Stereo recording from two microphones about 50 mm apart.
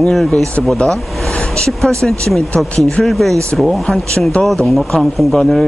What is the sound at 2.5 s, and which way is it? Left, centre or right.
Speech, left.